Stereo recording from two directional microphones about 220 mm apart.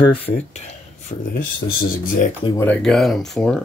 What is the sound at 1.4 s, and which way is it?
Speech, 40° left (ahead or behind).